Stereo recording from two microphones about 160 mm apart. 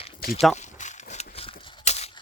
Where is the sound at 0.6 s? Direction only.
50° left (ahead or behind).